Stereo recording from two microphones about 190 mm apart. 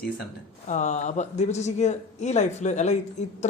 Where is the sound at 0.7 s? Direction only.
40° left (ahead or behind).